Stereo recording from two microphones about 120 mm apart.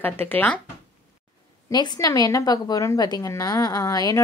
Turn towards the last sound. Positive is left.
turn(degrees=30)  # may be behind; listen again after turning